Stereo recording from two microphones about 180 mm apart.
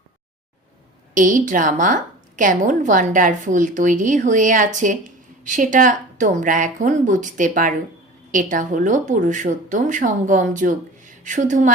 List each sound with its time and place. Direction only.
1.1 s a woman's voice: 45° right (ahead or behind)